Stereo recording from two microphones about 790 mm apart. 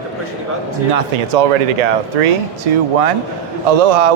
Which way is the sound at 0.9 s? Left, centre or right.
Right.